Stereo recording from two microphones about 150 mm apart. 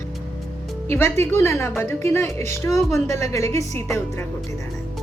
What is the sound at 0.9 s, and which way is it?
A woman's voice, 15° left (ahead or behind).